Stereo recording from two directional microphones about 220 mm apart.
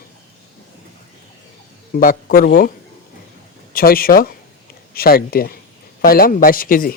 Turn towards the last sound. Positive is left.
turn(degrees=40)  # may be behind; listen again after turning